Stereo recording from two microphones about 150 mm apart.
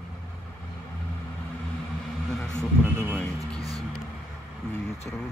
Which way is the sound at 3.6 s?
25° right (ahead or behind).